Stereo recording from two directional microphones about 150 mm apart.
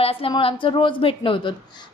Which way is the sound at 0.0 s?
40° left (ahead or behind).